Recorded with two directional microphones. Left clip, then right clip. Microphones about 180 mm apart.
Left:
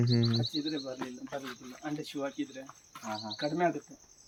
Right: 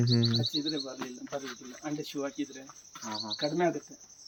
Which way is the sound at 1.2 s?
25° left (ahead or behind).